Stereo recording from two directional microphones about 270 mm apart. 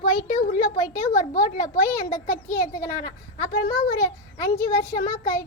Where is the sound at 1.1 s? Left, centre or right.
Left.